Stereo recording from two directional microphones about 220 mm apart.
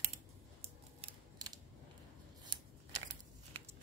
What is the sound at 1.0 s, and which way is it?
Mechanisms, 20° right (ahead or behind).